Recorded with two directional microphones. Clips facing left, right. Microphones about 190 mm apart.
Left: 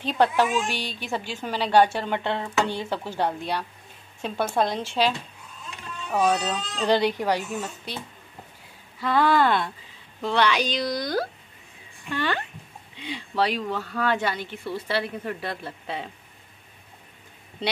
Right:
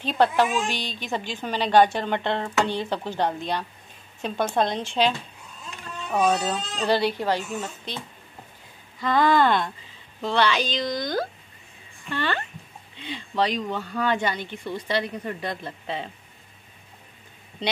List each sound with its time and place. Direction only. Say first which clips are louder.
0.0 s a woman's voice: right 1 dB; 10° left (ahead or behind)
6.3 s speech: right 1 dB; 10° right (ahead or behind)
6.9 s a woman's voice: left 1 dB; 15° left (ahead or behind)
9.0 s a woman's voice: right 1 dB; 10° left (ahead or behind)
12.1 s a woman's voice: even; 10° left (ahead or behind)